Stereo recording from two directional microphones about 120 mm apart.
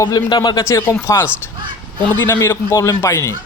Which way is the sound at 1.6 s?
40° right (ahead or behind).